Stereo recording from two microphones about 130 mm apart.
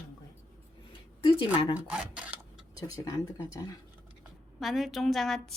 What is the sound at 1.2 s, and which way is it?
Speech, 40° left (ahead or behind).